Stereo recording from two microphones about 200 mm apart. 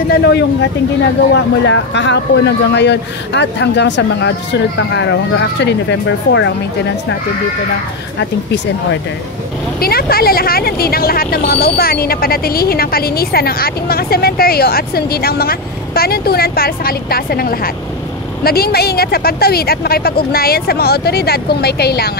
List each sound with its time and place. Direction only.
0.1 s speech: 55° left (ahead or behind)
9.8 s speech: 50° left (ahead or behind)